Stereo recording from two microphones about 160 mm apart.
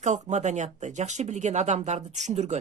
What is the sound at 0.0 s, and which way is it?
Speech, 50° right (ahead or behind).